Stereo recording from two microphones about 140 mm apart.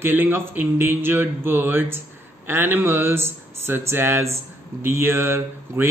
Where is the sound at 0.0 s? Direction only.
15° right (ahead or behind).